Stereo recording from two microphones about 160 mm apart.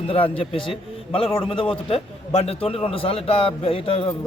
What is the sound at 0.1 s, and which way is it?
A man's voice, 35° left (ahead or behind).